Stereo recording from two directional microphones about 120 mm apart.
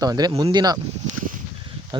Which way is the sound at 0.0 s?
35° right (ahead or behind).